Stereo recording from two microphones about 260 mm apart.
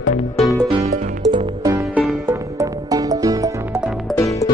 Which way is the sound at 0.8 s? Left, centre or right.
Right.